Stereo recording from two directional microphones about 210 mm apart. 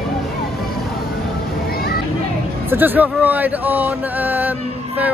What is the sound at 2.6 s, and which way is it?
Speech, 10° right (ahead or behind).